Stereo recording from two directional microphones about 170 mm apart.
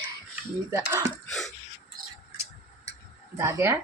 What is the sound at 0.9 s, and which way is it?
Speech, 20° right (ahead or behind).